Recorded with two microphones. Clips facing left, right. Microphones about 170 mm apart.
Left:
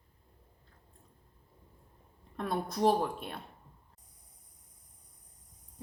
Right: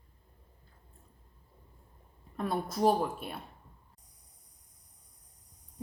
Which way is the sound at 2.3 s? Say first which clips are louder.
Right 1 dB; centre (ahead or behind).